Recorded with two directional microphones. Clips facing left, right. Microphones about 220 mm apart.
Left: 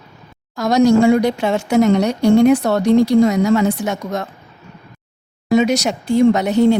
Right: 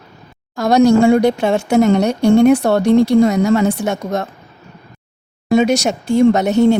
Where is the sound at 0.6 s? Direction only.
60° right (ahead or behind).